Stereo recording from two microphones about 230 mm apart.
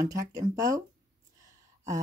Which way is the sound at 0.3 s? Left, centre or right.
Centre.